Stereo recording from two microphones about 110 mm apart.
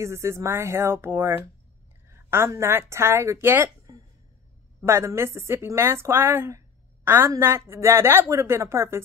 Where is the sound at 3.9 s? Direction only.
35° right (ahead or behind).